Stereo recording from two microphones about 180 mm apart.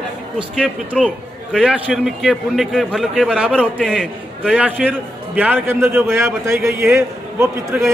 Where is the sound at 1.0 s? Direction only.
5° left (ahead or behind).